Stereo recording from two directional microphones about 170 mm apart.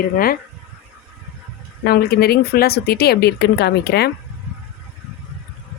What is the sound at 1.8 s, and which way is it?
Speech, 65° left (ahead or behind).